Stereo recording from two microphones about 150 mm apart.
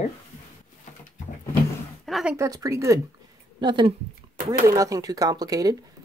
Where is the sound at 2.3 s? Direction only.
25° right (ahead or behind).